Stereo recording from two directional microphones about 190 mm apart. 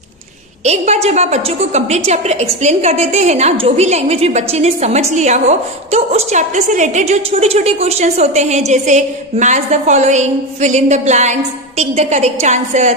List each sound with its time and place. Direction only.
0.7 s a woman's voice: 35° right (ahead or behind)